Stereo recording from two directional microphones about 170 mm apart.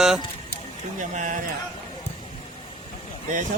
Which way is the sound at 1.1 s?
45° right (ahead or behind).